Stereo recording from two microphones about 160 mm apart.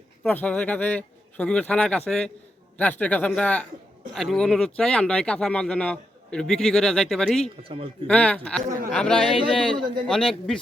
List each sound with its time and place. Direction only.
0.2 s a man's voice: 10° left (ahead or behind)
7.6 s speech: 35° right (ahead or behind)
8.0 s a man's voice: 5° left (ahead or behind)